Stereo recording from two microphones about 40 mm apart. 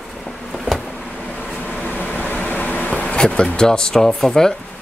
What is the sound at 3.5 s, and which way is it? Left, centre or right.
Speech, centre.